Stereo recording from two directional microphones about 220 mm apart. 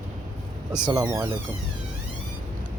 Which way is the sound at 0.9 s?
15° right (ahead or behind).